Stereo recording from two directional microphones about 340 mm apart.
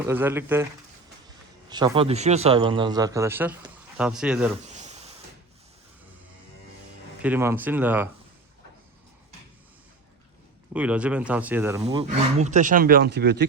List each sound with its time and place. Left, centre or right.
0.1 s a man's voice: centre
1.7 s a man's voice: centre
4.6 s a sound: centre
7.2 s speech: centre
10.8 s a man's voice: centre; by 13.5 s right